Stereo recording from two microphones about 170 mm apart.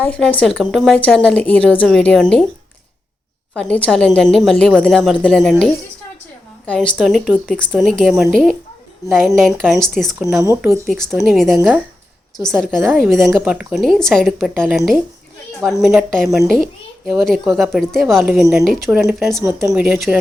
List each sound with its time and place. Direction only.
0.0 s a woman's voice: 10° left (ahead or behind)
3.5 s a woman's voice: 5° left (ahead or behind)
10.4 s speech: 15° right (ahead or behind)
10.8 s a woman's voice: 5° left (ahead or behind)
19.4 s speech: 15° right (ahead or behind)